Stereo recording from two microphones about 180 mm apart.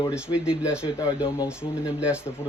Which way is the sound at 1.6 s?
5° right (ahead or behind).